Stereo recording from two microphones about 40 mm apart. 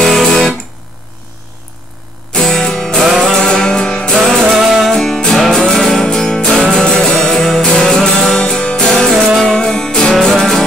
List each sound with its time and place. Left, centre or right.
0.0 s music: centre
2.5 s music: centre
3.0 s music: centre
3.3 s music: centre
4.5 s music: centre
4.9 s music: centre
9.3 s music: centre